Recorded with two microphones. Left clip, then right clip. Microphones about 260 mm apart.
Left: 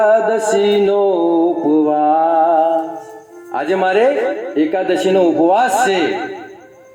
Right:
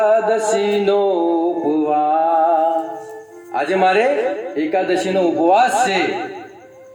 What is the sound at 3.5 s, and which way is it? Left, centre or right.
Music, left.